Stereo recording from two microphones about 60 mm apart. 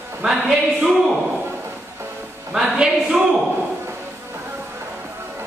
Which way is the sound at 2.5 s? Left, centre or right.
Centre.